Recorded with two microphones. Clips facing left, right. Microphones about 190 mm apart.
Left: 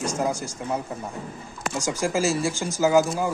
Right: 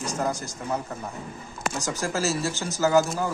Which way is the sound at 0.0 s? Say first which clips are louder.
Left 2 dB; 10° left (ahead or behind).